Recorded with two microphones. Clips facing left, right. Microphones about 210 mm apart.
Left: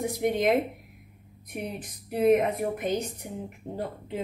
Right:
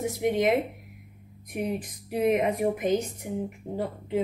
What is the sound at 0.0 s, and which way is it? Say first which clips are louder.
Speech: right 1 dB; 5° right (ahead or behind).